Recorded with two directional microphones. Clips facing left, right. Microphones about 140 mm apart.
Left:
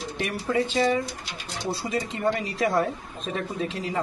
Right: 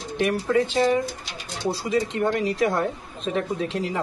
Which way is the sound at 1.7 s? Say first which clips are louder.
Right 5 dB; centre (ahead or behind).